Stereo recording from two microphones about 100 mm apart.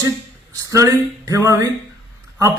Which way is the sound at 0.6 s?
30° right (ahead or behind).